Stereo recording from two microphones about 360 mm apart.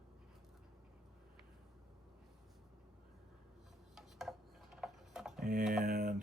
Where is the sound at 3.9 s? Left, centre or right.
Centre.